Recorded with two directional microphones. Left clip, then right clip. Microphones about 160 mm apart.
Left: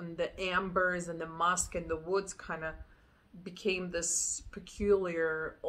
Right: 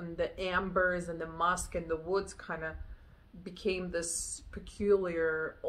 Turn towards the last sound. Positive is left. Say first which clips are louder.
# right 1 dB
turn(degrees=5)  # may be behind; listen again after turning